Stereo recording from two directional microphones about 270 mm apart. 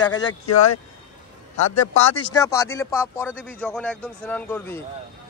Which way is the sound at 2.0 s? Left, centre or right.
Left.